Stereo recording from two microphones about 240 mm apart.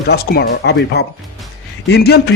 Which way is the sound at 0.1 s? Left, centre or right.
Left.